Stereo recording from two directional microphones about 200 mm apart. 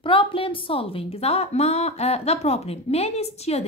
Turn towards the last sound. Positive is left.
turn(degrees=30)  # may be behind; listen again after turning